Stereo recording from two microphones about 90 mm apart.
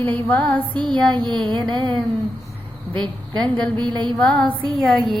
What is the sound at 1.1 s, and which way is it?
Speech, 55° right (ahead or behind).